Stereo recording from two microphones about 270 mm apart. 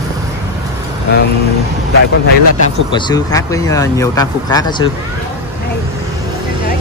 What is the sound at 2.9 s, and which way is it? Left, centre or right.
Speech, centre.